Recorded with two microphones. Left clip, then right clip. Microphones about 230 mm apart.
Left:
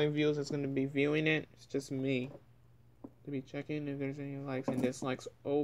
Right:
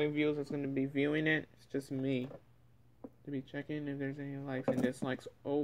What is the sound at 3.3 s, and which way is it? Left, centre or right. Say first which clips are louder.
Speech: left 1 dB; centre.